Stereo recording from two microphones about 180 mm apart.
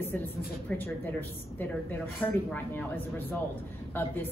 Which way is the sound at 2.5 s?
10° left (ahead or behind).